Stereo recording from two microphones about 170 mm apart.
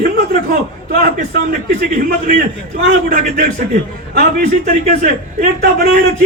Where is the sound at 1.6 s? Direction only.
55° right (ahead or behind).